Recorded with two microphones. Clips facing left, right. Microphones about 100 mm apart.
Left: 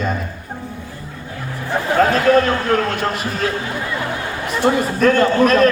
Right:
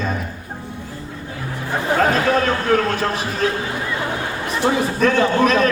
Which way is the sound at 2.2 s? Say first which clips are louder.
Left 3 dB; centre (ahead or behind).